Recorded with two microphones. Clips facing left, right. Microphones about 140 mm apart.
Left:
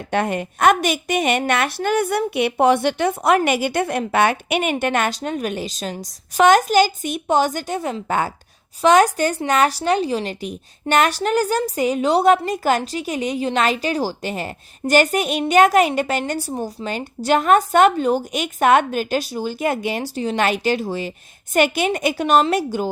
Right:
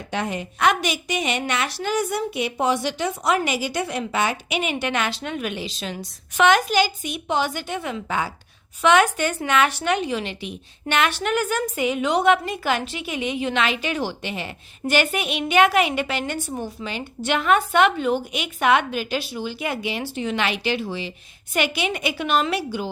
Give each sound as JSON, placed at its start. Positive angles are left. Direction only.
{"t": 0.1, "sound": "a woman's voice", "side_deg": 55}